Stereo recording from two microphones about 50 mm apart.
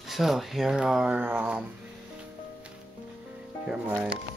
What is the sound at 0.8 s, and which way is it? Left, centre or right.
Speech, centre.